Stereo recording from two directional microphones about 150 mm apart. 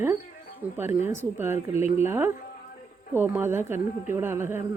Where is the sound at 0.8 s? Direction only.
15° right (ahead or behind).